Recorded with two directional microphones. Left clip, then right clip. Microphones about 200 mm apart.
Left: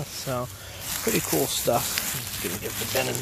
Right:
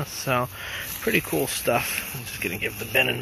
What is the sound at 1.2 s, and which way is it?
Speech, 5° left (ahead or behind).